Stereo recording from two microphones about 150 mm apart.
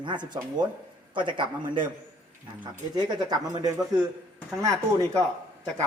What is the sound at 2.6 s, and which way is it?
Speech, 25° right (ahead or behind).